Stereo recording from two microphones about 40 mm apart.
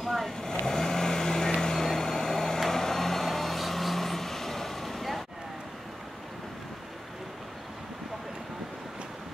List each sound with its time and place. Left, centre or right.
0.0 s vehicle: centre
0.4 s vehicle: centre